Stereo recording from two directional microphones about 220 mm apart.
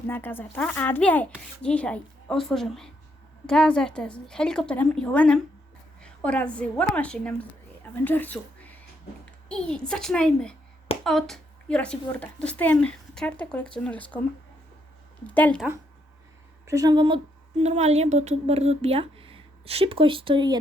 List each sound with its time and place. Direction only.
0.1 s a child's voice: 10° left (ahead or behind)
15.3 s speech: 5° left (ahead or behind)
16.6 s speech: 15° right (ahead or behind)
17.6 s speech: 30° right (ahead or behind)